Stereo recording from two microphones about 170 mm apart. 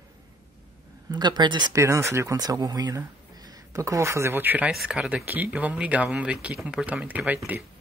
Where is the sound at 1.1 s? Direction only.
25° right (ahead or behind).